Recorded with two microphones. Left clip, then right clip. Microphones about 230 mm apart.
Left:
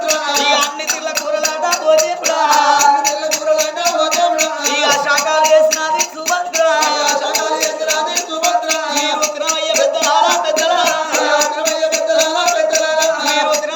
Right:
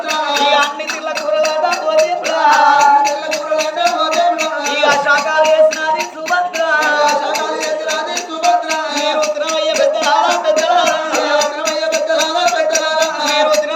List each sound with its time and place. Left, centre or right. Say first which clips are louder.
0.1 s music: right 2 dB; left
4.8 s music: right 2 dB; left
9.7 s music: left 1 dB; left; by 13.6 s centre